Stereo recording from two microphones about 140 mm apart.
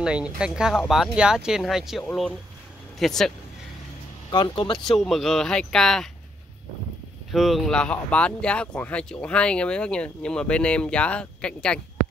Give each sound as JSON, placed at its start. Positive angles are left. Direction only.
{"t": 0.0, "sound": "speech", "side_deg": -5}
{"t": 4.3, "sound": "speech", "side_deg": 30}
{"t": 4.8, "sound": "speech", "side_deg": 0}
{"t": 7.2, "sound": "speech", "side_deg": 0}